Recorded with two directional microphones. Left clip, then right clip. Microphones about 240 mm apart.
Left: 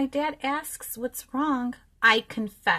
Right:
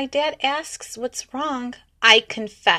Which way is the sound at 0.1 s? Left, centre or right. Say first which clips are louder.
Right 6 dB; centre.